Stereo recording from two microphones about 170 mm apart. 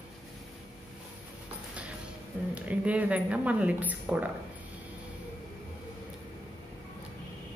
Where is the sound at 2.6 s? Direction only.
10° right (ahead or behind).